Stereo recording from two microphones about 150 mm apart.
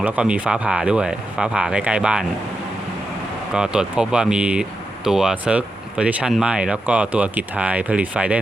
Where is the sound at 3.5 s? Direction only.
5° right (ahead or behind).